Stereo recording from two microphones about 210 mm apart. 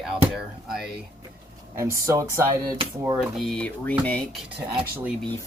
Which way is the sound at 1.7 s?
15° right (ahead or behind).